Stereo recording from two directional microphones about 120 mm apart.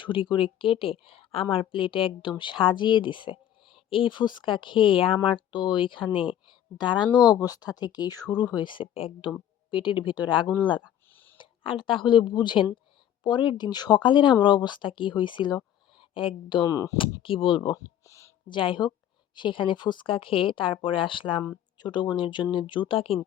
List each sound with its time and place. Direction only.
0.0 s speech: 45° left (ahead or behind)
11.1 s a sound: 15° left (ahead or behind)
11.3 s speech: 45° left (ahead or behind)
16.7 s speech: 30° left (ahead or behind)
17.0 s speech: 45° left (ahead or behind)
18.0 s a sound: 25° left (ahead or behind)
18.4 s speech: 45° left (ahead or behind)